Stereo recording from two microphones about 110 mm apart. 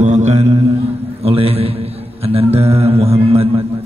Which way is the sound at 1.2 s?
60° right (ahead or behind).